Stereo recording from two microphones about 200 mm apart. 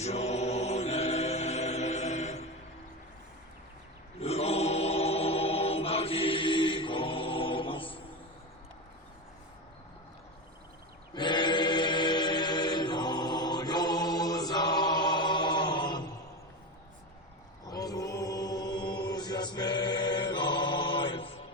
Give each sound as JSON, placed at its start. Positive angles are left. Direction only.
{"t": 0.0, "sound": "choir", "side_deg": 35}
{"t": 4.2, "sound": "chant", "side_deg": 30}
{"t": 11.1, "sound": "choir", "side_deg": 20}
{"t": 17.7, "sound": "music", "side_deg": 20}